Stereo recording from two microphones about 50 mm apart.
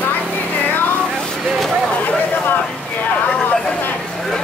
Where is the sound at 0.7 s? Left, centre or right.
Left.